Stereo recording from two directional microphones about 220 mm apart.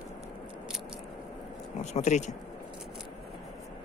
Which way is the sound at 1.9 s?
30° left (ahead or behind).